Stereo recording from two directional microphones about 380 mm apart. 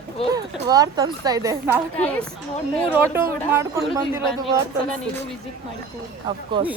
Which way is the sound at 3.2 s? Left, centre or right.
Centre.